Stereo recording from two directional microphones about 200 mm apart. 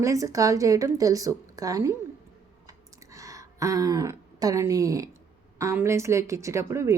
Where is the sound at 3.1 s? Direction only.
15° right (ahead or behind).